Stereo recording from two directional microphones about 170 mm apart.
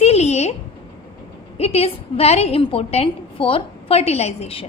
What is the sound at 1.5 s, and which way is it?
A woman's voice, 35° left (ahead or behind).